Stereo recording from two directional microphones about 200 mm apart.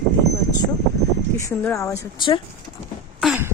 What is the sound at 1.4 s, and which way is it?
Speech, 15° left (ahead or behind).